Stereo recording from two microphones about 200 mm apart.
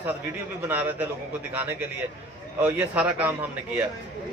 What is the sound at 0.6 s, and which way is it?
Speech, 10° right (ahead or behind).